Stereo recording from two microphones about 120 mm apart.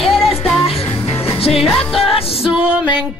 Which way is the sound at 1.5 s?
Centre (ahead or behind).